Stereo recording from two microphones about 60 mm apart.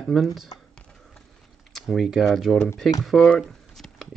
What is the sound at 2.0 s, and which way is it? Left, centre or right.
Speech, centre.